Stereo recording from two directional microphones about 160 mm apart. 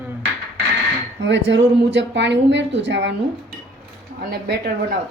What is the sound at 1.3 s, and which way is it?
A woman's voice, 90° right.